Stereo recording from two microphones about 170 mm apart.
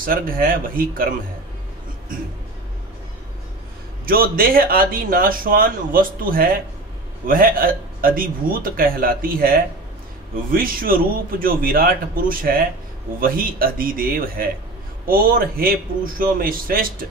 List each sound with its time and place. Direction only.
0.0 s speech: 55° right (ahead or behind)
4.0 s speech: 60° right (ahead or behind)